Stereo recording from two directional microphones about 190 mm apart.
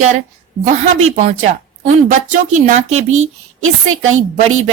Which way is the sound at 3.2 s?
90° right.